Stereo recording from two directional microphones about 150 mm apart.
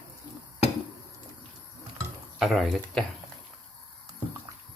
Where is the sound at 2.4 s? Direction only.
Centre (ahead or behind).